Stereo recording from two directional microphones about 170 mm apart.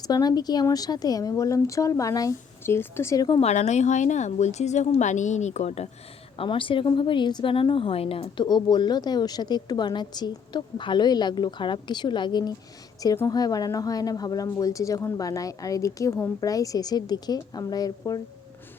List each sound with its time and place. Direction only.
0.0 s a woman's voice: 20° left (ahead or behind)
3.4 s a woman's voice: 40° left (ahead or behind); by 18.2 s 20° left (ahead or behind)